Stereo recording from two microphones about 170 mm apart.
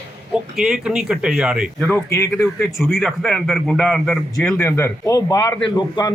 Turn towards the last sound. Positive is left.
turn(degrees=25)  # may be behind; listen again after turning